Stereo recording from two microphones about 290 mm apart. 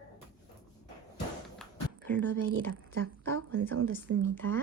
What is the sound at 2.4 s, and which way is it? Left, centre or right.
Speech, right.